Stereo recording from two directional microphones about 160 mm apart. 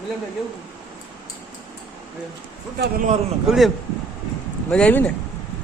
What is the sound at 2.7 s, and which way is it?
Speech, 85° right.